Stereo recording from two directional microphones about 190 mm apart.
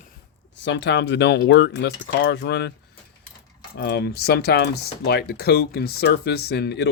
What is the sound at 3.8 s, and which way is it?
Speech, 60° left (ahead or behind).